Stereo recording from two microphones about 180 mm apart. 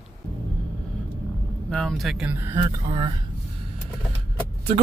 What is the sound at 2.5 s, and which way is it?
Speech, 25° right (ahead or behind).